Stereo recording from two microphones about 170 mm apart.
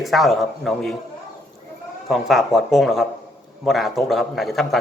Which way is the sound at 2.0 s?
Centre (ahead or behind).